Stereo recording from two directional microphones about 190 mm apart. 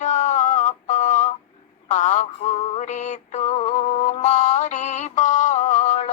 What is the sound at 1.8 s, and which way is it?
Synthetic singing, 40° left (ahead or behind).